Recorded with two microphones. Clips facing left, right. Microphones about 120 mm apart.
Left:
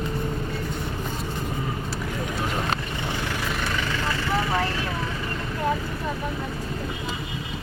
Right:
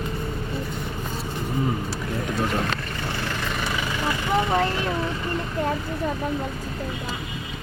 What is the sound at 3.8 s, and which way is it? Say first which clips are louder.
Vehicle: right 1 dB; 15° right (ahead or behind).